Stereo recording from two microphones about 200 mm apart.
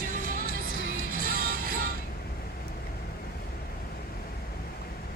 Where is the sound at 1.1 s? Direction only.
45° right (ahead or behind).